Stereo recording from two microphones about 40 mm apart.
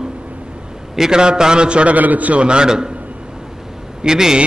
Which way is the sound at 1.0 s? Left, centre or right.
Centre.